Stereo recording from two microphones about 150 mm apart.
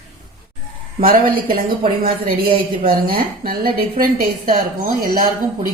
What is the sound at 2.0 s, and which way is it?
A woman's voice, 85° right.